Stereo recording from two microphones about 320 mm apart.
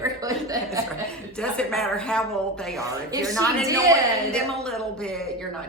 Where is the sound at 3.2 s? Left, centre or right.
Centre.